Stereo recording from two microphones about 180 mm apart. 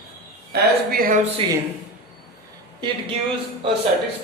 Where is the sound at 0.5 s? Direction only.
55° right (ahead or behind).